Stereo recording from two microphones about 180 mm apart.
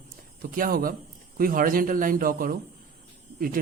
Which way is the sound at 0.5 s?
50° right (ahead or behind).